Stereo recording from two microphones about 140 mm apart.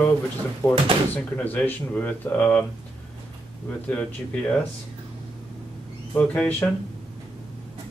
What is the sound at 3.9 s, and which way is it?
Speech, 10° left (ahead or behind).